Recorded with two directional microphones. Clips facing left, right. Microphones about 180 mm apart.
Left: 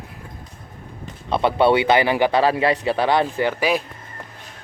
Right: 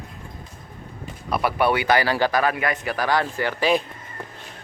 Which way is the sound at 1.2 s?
25° left (ahead or behind).